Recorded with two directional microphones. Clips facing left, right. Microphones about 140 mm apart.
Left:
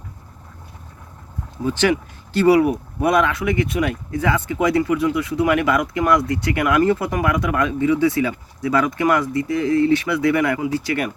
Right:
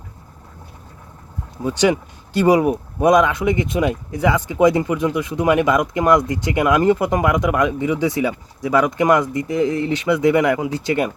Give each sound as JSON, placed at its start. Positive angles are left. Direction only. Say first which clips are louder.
{"t": 1.6, "sound": "speech", "louder": "right 1 dB", "side_deg": -15}